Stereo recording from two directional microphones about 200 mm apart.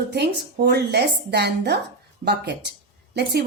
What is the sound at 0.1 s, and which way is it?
A woman's voice, 55° right (ahead or behind).